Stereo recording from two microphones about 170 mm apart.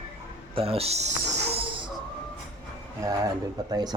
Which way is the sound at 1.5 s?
30° right (ahead or behind).